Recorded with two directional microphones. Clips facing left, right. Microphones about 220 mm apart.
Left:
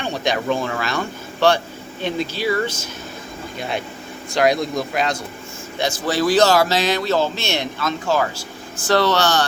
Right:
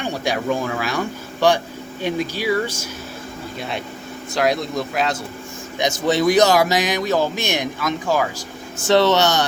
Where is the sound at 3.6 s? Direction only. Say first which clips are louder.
Left 3 dB; centre (ahead or behind).